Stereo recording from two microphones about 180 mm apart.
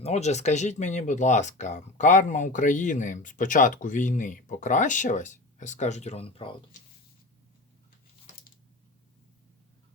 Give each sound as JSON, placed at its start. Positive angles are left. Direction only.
{"t": 0.0, "sound": "speech", "side_deg": 40}